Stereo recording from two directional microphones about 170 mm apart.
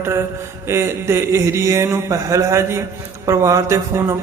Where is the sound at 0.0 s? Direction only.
15° right (ahead or behind).